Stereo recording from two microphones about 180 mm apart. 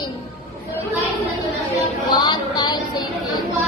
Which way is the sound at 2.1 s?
25° left (ahead or behind).